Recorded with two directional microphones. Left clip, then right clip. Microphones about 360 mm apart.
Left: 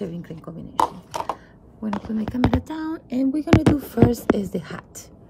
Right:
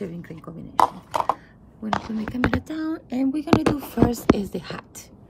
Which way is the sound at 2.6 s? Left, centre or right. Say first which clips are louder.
Right 1 dB; centre.